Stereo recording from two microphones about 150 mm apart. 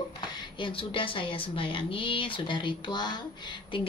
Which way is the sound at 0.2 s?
30° left (ahead or behind).